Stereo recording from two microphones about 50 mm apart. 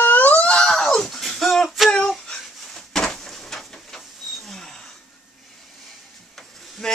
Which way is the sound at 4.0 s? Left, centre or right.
Centre.